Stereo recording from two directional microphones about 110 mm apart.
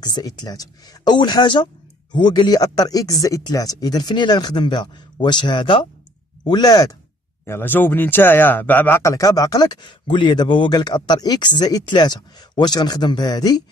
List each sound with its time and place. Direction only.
0.0 s speech: 35° left (ahead or behind)
7.4 s speech: 20° left (ahead or behind)
9.0 s speech: 30° left (ahead or behind)